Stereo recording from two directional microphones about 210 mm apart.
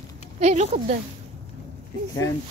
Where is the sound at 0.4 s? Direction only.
30° right (ahead or behind).